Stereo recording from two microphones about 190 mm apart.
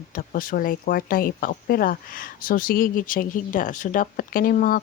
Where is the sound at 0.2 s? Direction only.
45° left (ahead or behind).